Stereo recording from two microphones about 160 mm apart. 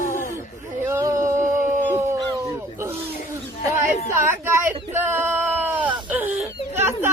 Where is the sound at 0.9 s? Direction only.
20° right (ahead or behind).